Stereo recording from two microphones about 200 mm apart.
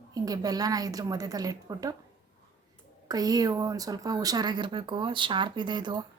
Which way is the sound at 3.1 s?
20° right (ahead or behind).